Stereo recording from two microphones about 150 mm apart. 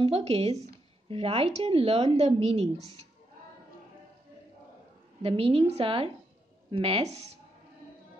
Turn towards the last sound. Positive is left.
turn(degrees=-45)  # may be behind; listen again after turning